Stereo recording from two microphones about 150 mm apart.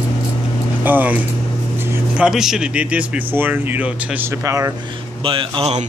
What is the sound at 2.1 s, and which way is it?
Speech, 5° right (ahead or behind).